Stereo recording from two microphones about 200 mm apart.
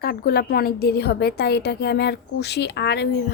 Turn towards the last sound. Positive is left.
turn(degrees=55)  # may be behind; listen again after turning